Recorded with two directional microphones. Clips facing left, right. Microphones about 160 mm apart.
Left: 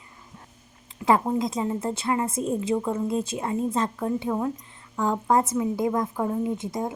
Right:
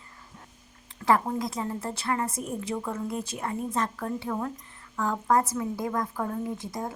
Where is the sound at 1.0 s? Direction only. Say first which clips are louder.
Left 3 dB; 20° left (ahead or behind).